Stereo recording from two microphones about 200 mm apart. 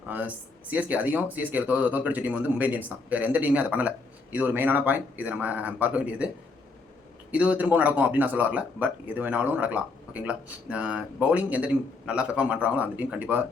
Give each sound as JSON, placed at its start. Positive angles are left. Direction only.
{"t": 0.1, "sound": "speech", "side_deg": -10}